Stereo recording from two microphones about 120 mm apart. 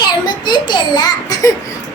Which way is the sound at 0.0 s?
40° left (ahead or behind).